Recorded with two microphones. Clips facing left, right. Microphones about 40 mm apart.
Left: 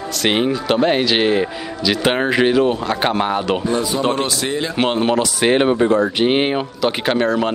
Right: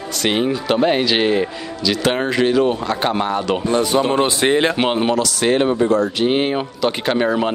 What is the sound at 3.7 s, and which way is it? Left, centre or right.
Speech, right.